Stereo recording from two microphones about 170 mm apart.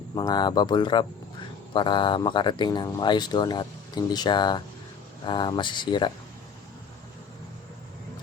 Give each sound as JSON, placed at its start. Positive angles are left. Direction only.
{"t": 0.1, "sound": "speech", "side_deg": 25}